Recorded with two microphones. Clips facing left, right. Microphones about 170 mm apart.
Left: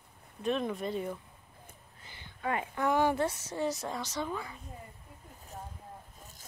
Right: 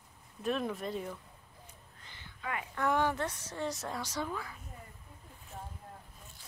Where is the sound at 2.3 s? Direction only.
35° left (ahead or behind).